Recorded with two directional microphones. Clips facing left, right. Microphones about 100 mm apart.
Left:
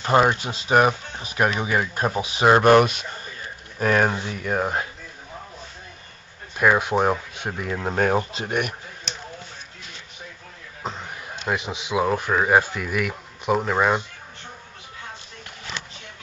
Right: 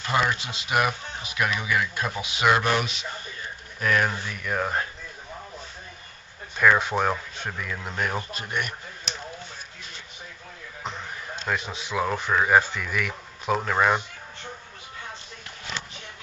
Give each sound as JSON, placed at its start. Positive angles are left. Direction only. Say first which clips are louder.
{"t": 0.0, "sound": "speech", "louder": "left 6 dB", "side_deg": 40}
{"t": 3.8, "sound": "speech", "louder": "left 4 dB", "side_deg": 40}
{"t": 4.1, "sound": "speech", "louder": "left 4 dB", "side_deg": 25}
{"t": 6.5, "sound": "speech", "louder": "left 2 dB", "side_deg": 10}
{"t": 7.6, "sound": "speech", "louder": "left 9 dB", "side_deg": 35}
{"t": 8.3, "sound": "speech", "louder": "left 5 dB", "side_deg": 85}
{"t": 9.1, "sound": "a sound", "louder": "right 1 dB", "side_deg": 0}
{"t": 11.4, "sound": "speech", "louder": "left 3 dB", "side_deg": 10}